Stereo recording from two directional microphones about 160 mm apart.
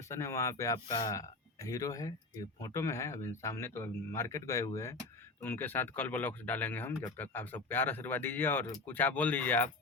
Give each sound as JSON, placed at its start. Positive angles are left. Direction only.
{"t": 0.1, "sound": "speech", "side_deg": 20}